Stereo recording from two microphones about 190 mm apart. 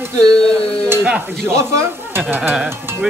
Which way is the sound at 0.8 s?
10° right (ahead or behind).